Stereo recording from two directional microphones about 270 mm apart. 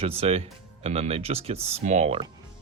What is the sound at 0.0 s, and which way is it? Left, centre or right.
Speech, right.